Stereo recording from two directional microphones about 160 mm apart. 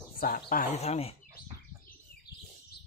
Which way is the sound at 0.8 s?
40° left (ahead or behind).